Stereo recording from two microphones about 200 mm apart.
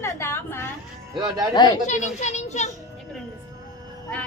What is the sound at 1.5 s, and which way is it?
Speech, 20° left (ahead or behind).